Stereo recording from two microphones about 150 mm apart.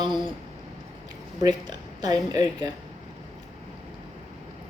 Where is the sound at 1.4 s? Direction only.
30° right (ahead or behind).